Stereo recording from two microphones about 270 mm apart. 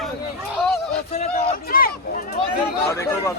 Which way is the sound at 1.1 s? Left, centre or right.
Left.